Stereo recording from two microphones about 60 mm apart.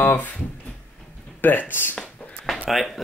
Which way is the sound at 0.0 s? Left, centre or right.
Left.